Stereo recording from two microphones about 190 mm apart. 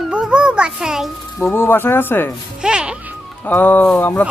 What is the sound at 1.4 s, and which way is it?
Speech, 10° left (ahead or behind).